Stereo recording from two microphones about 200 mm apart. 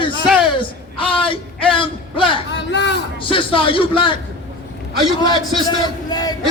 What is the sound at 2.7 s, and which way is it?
Speech, 60° left (ahead or behind).